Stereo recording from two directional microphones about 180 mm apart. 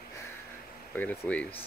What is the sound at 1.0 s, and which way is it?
Speech, 10° left (ahead or behind).